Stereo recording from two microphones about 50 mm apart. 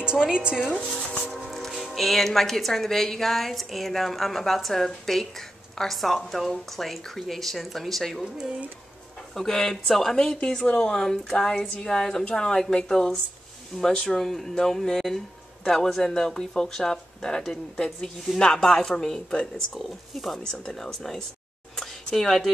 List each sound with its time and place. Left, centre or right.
0.0 s a woman's voice: centre
1.3 s speech: centre
9.3 s speech: centre
19.5 s speech: centre
21.7 s a sound: centre